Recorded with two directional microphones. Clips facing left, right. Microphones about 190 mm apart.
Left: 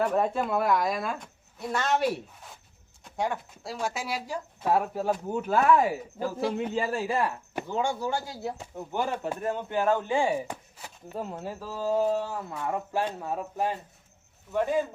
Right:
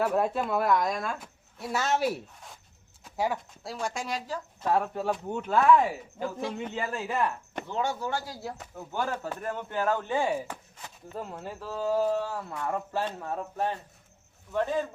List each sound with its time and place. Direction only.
0.0 s speech: 5° right (ahead or behind)
8.1 s speech: 25° left (ahead or behind); by 11.9 s 5° left (ahead or behind)
11.9 s speech: 20° left (ahead or behind)